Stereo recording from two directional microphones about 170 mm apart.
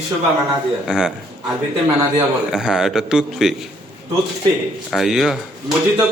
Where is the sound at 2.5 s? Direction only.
5° right (ahead or behind).